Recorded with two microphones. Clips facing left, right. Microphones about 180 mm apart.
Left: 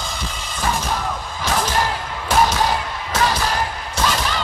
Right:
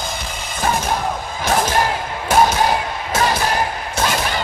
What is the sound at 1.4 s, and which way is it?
Music, 50° right (ahead or behind).